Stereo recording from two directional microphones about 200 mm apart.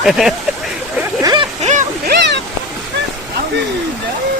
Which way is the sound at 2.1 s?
60° right (ahead or behind).